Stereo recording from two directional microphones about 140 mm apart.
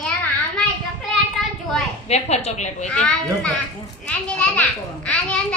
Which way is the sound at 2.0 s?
50° left (ahead or behind).